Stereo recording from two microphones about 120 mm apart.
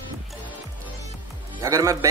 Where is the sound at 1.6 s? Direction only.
25° right (ahead or behind).